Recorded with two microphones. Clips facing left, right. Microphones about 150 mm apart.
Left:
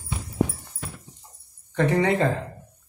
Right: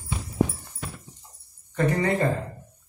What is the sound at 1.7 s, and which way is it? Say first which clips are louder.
Speech: left 2 dB; 80° left.